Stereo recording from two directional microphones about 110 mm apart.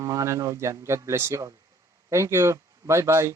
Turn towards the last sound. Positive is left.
turn(degrees=-25)  # may be behind; listen again after turning